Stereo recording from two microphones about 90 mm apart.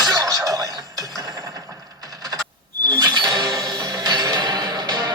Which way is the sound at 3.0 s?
50° right (ahead or behind).